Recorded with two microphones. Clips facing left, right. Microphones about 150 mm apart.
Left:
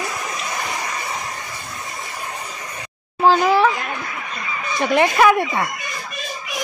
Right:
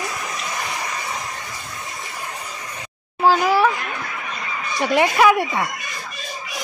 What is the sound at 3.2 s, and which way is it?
Speech, 5° right (ahead or behind).